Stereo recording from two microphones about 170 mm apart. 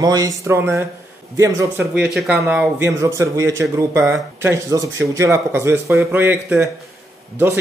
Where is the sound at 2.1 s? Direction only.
Centre (ahead or behind).